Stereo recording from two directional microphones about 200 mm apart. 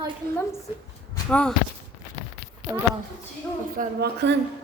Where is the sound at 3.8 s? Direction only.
55° right (ahead or behind).